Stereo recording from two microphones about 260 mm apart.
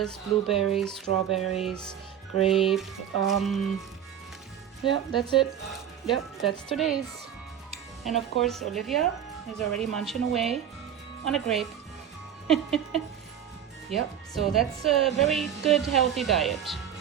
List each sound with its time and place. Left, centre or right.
0.1 s a woman's voice: centre
2.5 s a woman's voice: centre
4.9 s speech: centre
5.4 s a woman's voice: centre
8.0 s a woman's voice: centre